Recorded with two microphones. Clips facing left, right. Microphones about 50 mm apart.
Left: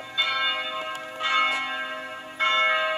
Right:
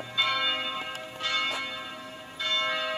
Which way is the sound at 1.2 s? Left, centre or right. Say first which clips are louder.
Left 7 dB; left.